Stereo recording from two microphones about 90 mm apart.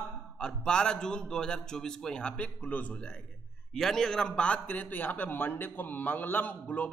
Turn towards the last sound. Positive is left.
turn(degrees=20)  # may be behind; listen again after turning